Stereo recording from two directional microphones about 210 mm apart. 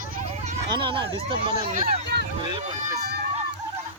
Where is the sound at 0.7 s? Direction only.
25° right (ahead or behind).